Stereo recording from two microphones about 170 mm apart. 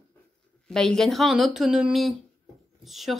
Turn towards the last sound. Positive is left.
turn(degrees=0)  # may be behind; listen again after turning